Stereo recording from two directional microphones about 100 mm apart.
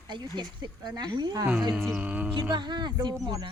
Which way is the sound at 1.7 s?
Centre (ahead or behind).